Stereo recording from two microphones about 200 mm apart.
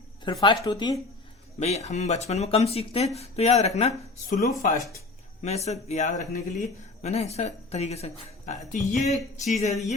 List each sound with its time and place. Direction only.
0.3 s speech: 20° left (ahead or behind)
1.5 s speech: 35° left (ahead or behind)
4.4 s speech: 50° left (ahead or behind)
5.4 s speech: 30° left (ahead or behind)